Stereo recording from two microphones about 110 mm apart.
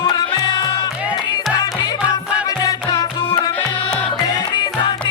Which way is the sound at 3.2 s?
55° left (ahead or behind).